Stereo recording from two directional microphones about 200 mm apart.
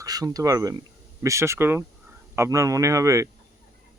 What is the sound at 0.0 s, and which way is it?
Speech, 20° right (ahead or behind).